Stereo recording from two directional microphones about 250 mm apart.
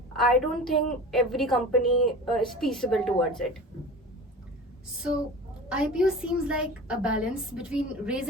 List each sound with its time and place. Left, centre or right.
0.2 s a woman's voice: centre
5.6 s a woman's voice: centre